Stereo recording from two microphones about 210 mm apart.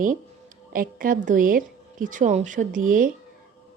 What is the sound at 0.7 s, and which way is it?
A woman's voice, 40° right (ahead or behind).